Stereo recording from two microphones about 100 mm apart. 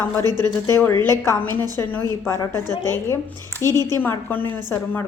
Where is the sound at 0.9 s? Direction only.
40° right (ahead or behind).